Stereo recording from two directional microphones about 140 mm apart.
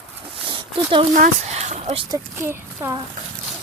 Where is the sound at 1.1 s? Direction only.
60° right (ahead or behind); by 2.0 s 45° right (ahead or behind).